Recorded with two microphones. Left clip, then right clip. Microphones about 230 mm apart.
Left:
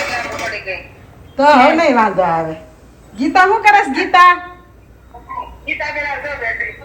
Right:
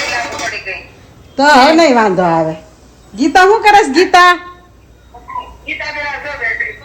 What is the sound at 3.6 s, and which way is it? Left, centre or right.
Speech, right.